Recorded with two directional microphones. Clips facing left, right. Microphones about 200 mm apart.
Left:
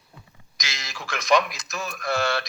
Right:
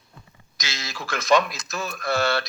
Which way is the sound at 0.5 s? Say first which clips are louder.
Right 3 dB; centre (ahead or behind).